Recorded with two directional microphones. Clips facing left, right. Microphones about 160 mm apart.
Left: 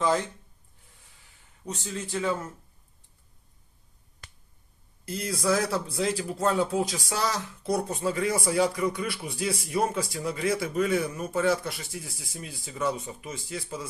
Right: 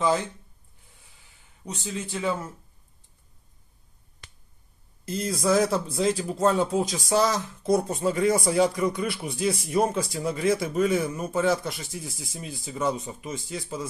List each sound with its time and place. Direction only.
1.6 s a man's voice: 10° right (ahead or behind)
4.2 s finger snapping: 45° left (ahead or behind)
5.0 s speech: 20° right (ahead or behind)